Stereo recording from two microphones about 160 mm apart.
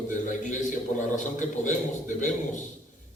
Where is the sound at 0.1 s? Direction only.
50° left (ahead or behind).